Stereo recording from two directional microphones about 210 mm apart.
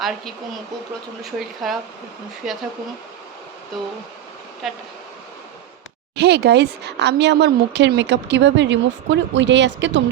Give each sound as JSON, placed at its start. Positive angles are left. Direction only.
{"t": 1.2, "sound": "speech", "side_deg": 0}
{"t": 4.6, "sound": "speech", "side_deg": 0}
{"t": 6.1, "sound": "speech", "side_deg": -50}